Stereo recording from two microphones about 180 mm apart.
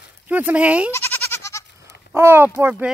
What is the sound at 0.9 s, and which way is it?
Goat, 10° left (ahead or behind).